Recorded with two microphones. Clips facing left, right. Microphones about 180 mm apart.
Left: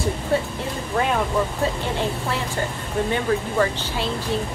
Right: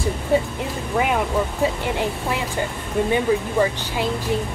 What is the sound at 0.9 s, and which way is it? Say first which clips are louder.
Speech: right 1 dB; 10° right (ahead or behind).